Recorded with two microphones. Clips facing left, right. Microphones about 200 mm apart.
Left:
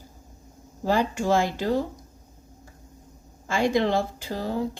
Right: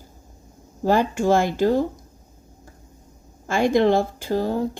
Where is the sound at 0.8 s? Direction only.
50° right (ahead or behind).